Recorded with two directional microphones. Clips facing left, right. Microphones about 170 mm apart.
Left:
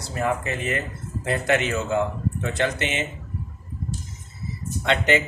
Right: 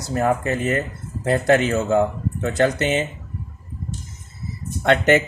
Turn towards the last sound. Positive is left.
turn(degrees=-50)  # may be behind; listen again after turning